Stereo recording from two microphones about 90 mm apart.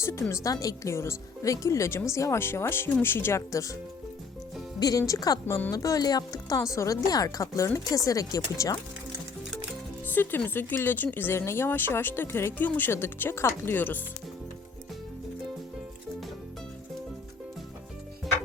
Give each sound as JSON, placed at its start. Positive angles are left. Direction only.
{"t": 0.0, "sound": "a woman's voice", "side_deg": 30}
{"t": 4.8, "sound": "speech", "side_deg": 40}
{"t": 5.5, "sound": "speech", "side_deg": 20}
{"t": 5.7, "sound": "speech", "side_deg": 40}
{"t": 6.6, "sound": "a woman's voice", "side_deg": 35}
{"t": 10.1, "sound": "speech", "side_deg": 20}